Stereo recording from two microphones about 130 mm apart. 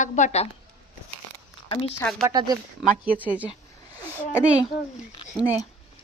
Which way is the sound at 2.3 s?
30° right (ahead or behind).